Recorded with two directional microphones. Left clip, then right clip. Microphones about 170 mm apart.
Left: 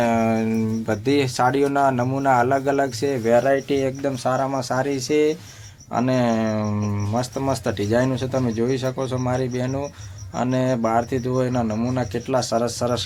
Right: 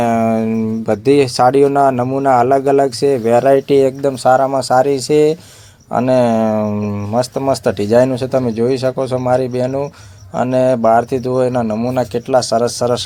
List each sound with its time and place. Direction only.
0.0 s speech: 30° right (ahead or behind)